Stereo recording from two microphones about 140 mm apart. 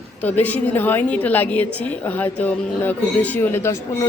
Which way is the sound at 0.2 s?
10° left (ahead or behind).